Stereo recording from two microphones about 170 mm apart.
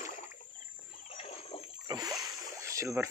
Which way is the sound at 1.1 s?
35° left (ahead or behind).